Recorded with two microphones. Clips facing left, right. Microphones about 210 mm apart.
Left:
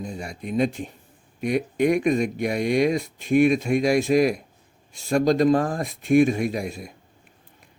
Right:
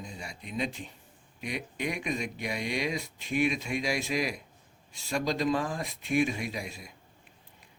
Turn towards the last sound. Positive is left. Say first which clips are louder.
# left 10 dB
turn(degrees=50)  # may be behind; listen again after turning